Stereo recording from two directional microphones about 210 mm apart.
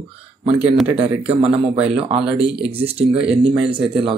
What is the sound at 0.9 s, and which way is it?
Speech, 30° right (ahead or behind).